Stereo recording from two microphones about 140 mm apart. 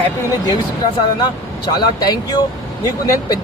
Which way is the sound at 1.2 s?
30° left (ahead or behind).